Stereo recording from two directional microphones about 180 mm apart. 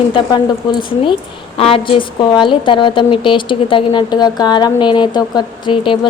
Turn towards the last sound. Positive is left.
turn(degrees=30)  # may be behind; listen again after turning